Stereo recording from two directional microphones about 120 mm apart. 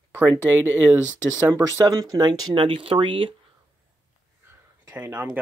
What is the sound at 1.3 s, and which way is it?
Speech, 25° right (ahead or behind).